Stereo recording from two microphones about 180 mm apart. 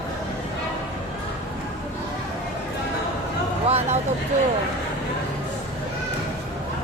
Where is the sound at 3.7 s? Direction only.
35° right (ahead or behind).